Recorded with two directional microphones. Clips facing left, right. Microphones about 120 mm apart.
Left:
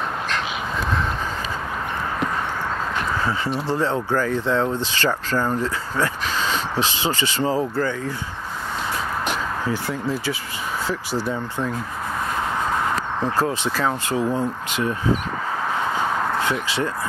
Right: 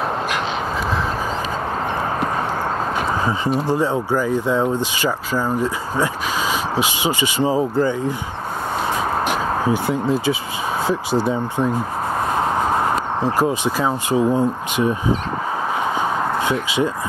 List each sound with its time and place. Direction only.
3.6 s speech: 15° right (ahead or behind)
9.7 s speech: 20° right (ahead or behind)
13.2 s speech: 15° right (ahead or behind)
16.0 s a sound: 15° right (ahead or behind)